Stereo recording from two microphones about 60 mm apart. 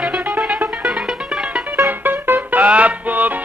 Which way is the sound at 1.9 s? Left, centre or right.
Right.